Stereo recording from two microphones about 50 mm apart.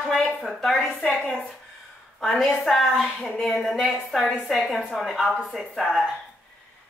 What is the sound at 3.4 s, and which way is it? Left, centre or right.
A woman's voice, centre.